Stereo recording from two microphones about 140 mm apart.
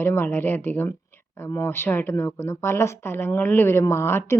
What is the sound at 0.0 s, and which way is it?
Speech, 15° left (ahead or behind).